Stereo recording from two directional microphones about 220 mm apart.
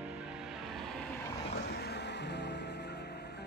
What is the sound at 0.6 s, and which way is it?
Vehicle, centre (ahead or behind).